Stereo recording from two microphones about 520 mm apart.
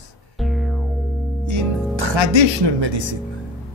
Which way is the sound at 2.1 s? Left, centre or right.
Right.